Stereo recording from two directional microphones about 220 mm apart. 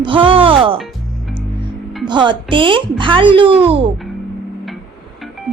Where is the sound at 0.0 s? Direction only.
25° right (ahead or behind).